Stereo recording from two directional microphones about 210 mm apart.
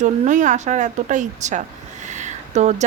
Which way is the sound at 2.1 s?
35° right (ahead or behind).